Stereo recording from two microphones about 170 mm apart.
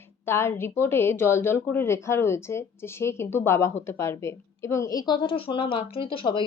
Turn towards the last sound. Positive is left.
turn(degrees=30)  # may be behind; listen again after turning